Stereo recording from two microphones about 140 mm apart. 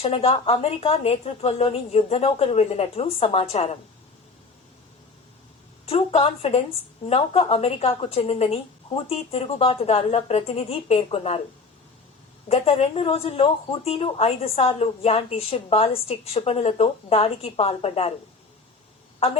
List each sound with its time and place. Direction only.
0.0 s speech: 45° left (ahead or behind)
5.8 s speech: 45° left (ahead or behind)
12.5 s speech: 45° left (ahead or behind)